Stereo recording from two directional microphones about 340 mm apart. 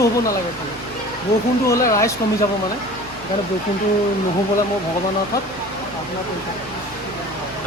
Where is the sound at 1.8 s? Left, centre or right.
Centre.